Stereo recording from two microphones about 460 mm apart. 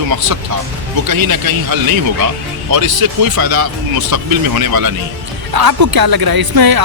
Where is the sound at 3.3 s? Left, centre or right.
Right.